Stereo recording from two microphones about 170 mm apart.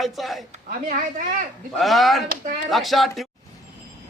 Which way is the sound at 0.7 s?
50° right (ahead or behind).